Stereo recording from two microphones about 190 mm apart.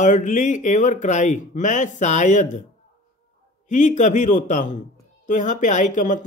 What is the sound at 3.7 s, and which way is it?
Speech, 40° left (ahead or behind).